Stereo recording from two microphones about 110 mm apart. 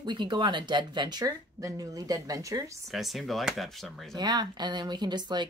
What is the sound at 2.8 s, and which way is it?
Speech, centre (ahead or behind).